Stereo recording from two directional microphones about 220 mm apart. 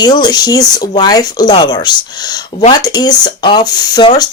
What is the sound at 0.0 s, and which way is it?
Speech, 20° left (ahead or behind).